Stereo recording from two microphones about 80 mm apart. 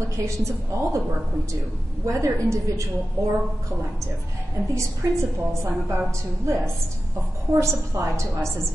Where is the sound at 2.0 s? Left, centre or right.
Right.